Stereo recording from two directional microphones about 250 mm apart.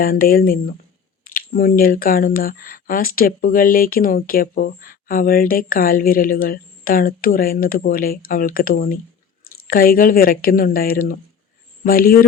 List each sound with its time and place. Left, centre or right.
0.0 s speech: left